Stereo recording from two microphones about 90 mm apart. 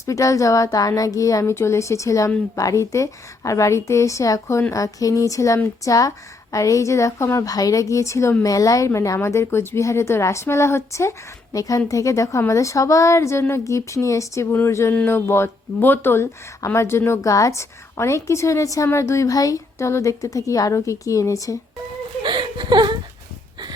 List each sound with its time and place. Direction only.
0.0 s speech: 35° left (ahead or behind)
8.4 s speech: 40° left (ahead or behind)
14.5 s a sound: 30° left (ahead or behind)
15.0 s speech: 25° left (ahead or behind)
22.2 s speech: 60° right (ahead or behind)